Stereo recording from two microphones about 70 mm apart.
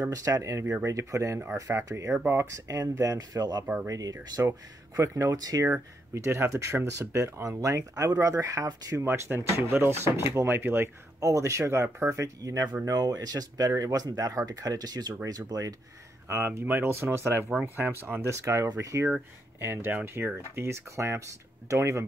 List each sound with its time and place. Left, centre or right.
0.1 s speech: right
3.8 s speech: right
4.5 s speech: right
7.4 s speech: right
8.9 s speech: right
11.1 s speech: right
15.2 s speech: right
16.3 s speech: right
19.6 s speech: right